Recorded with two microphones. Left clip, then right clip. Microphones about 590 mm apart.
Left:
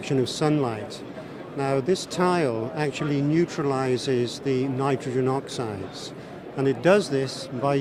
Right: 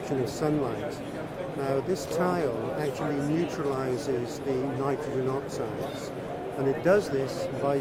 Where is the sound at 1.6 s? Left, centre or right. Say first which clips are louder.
Left 5 dB; left.